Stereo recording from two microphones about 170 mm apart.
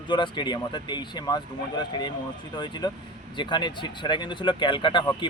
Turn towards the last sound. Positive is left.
turn(degrees=30)  # may be behind; listen again after turning